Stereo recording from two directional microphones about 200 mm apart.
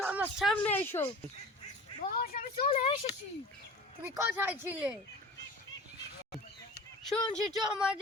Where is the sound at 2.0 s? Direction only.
50° left (ahead or behind).